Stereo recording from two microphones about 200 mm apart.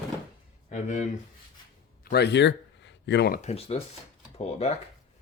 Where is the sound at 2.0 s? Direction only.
55° left (ahead or behind).